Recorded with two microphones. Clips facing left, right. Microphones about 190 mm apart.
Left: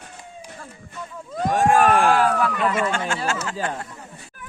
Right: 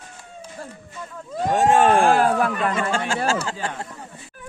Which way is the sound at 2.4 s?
45° right (ahead or behind).